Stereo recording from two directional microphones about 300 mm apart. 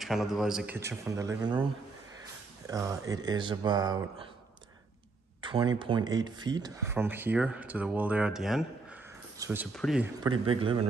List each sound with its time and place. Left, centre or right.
0.0 s speech: centre
2.6 s speech: centre
5.4 s speech: centre
10.4 s speech: centre